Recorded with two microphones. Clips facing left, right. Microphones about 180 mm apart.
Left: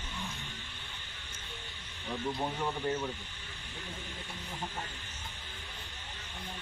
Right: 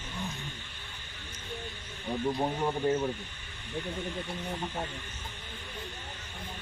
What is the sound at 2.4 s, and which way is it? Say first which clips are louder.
Speech: right 5 dB; 25° right (ahead or behind).